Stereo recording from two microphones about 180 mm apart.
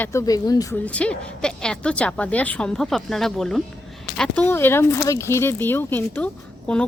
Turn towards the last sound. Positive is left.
turn(degrees=5)  # may be behind; listen again after turning